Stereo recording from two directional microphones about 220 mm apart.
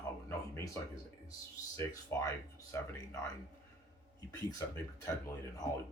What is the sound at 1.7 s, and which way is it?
Speech, 15° left (ahead or behind).